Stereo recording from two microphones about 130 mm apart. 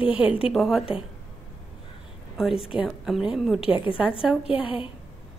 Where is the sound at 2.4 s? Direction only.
5° right (ahead or behind).